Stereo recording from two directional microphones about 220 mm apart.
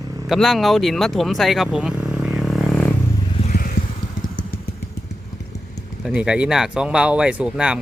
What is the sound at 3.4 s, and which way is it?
Vehicle, 35° left (ahead or behind).